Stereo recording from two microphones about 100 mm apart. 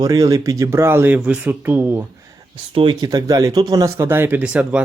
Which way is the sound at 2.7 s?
60° right (ahead or behind).